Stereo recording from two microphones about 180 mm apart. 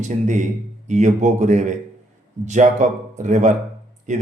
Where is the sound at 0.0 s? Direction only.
40° right (ahead or behind).